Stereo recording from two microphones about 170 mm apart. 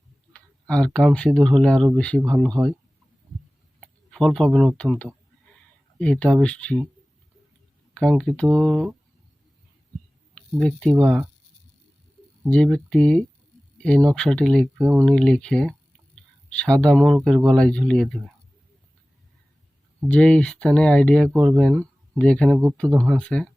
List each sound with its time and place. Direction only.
0.3 s speech: 5° left (ahead or behind)
2.6 s speech: 15° right (ahead or behind)
3.8 s speech: centre (ahead or behind)
7.9 s speech: 5° left (ahead or behind)
10.3 s speech: 5° left (ahead or behind)
10.9 s speech: 5° right (ahead or behind)
12.5 s speech: 5° left (ahead or behind)
20.1 s speech: 5° left (ahead or behind)
21.2 s speech: 20° right (ahead or behind)
21.5 s speech: 5° left (ahead or behind)